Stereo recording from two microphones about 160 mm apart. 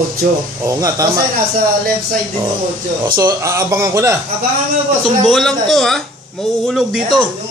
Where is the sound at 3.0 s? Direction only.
25° right (ahead or behind).